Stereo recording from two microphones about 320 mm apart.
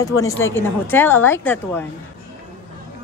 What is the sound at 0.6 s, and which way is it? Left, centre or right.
A woman's voice, centre.